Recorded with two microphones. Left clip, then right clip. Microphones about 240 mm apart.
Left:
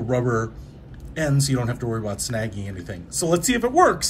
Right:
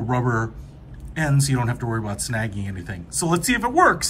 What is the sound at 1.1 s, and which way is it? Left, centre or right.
Speech, centre.